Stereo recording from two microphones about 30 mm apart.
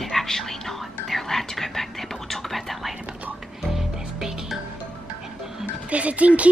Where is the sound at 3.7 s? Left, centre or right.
Centre.